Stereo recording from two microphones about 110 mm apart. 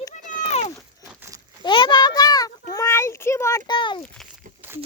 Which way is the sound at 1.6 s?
45° left (ahead or behind).